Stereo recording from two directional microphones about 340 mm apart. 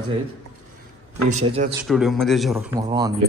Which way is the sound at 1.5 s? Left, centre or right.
Centre.